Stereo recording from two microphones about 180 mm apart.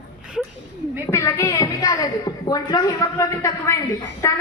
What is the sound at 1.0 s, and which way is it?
A woman's voice, 15° left (ahead or behind).